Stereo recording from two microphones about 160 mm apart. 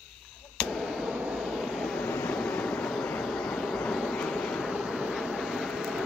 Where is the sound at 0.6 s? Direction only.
Centre (ahead or behind).